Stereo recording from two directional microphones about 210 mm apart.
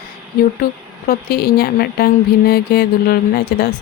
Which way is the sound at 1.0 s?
45° left (ahead or behind).